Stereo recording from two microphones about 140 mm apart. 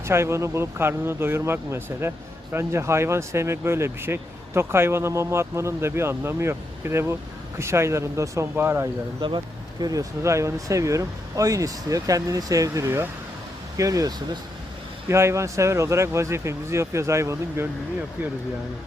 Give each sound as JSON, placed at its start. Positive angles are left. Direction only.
{"t": 0.0, "sound": "speech", "side_deg": -20}